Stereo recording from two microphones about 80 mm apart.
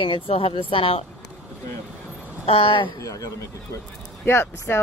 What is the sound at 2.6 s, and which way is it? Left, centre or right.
Speech, left.